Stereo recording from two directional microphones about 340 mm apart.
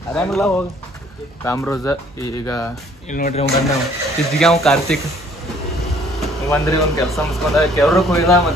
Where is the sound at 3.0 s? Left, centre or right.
Left.